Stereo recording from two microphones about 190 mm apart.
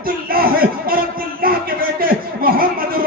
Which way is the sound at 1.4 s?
50° right (ahead or behind).